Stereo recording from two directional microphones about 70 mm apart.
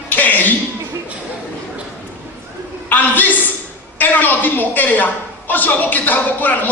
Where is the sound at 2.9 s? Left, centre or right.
Left.